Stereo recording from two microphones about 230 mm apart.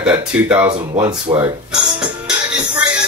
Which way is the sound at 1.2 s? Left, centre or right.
Right.